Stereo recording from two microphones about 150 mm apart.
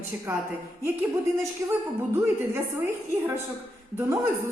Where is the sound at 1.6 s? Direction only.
20° right (ahead or behind).